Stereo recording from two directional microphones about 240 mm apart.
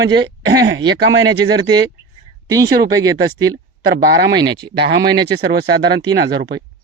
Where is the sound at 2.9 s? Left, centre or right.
Centre.